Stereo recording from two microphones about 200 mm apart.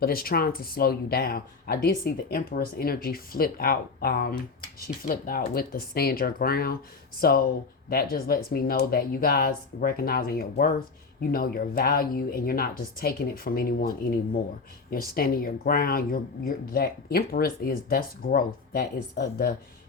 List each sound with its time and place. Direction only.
0.0 s speech: 50° left (ahead or behind)